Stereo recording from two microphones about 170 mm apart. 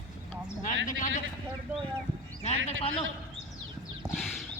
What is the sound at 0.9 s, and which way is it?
Speech, 50° left (ahead or behind).